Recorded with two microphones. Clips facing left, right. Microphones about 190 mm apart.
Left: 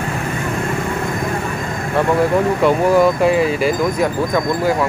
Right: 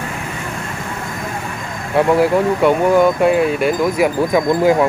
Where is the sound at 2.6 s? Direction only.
Centre (ahead or behind).